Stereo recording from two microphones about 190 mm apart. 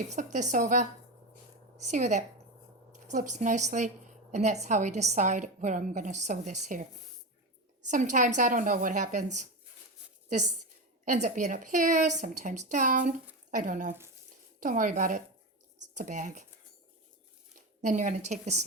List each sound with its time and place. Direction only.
0.1 s a woman's voice: 40° right (ahead or behind)
7.9 s a woman's voice: 40° right (ahead or behind)
17.8 s a woman's voice: 40° right (ahead or behind)